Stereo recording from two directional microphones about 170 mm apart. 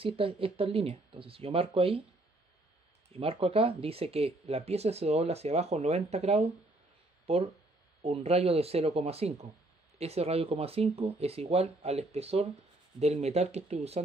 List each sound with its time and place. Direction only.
0.0 s speech: 35° right (ahead or behind)
3.1 s speech: 35° right (ahead or behind)